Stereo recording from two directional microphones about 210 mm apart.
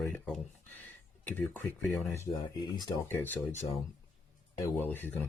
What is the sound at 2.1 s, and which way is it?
Speech, 20° left (ahead or behind).